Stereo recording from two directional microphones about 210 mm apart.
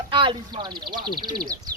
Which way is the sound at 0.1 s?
25° right (ahead or behind).